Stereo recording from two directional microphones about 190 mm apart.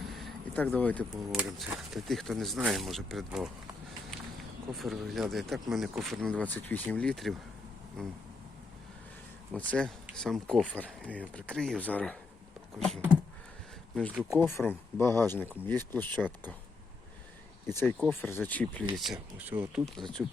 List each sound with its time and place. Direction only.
0.0 s speech: centre (ahead or behind)
4.7 s speech: centre (ahead or behind)
9.5 s speech: 5° left (ahead or behind)
14.1 s speech: 5° right (ahead or behind)
14.3 s speech: 10° left (ahead or behind)
17.7 s speech: 15° left (ahead or behind); by 20.3 s 5° right (ahead or behind)